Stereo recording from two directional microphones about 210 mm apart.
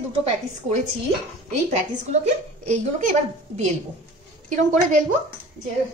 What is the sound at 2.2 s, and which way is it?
A woman's voice, 35° right (ahead or behind).